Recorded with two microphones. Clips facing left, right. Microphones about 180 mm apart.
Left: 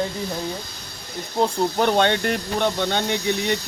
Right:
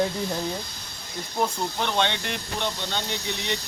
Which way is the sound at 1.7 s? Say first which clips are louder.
Left 7 dB; 50° left (ahead or behind).